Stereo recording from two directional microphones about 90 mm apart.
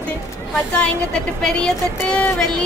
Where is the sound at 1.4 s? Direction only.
10° left (ahead or behind).